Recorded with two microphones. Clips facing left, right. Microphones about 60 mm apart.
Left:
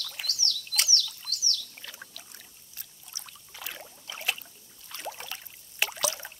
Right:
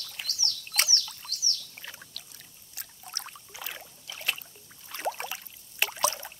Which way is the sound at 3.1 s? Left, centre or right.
Right.